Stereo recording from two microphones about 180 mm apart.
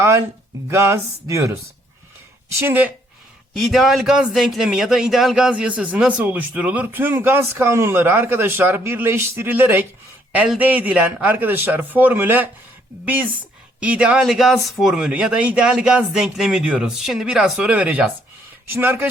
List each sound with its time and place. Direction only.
0.7 s speech: 15° right (ahead or behind)
3.5 s speech: centre (ahead or behind)
13.7 s speech: 5° right (ahead or behind)